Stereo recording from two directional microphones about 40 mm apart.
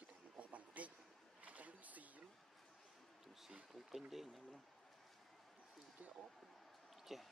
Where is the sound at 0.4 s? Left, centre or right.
Right.